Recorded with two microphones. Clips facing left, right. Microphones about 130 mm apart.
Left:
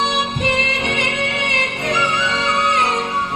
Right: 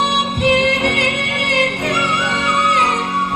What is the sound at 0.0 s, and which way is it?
Music, 55° right (ahead or behind).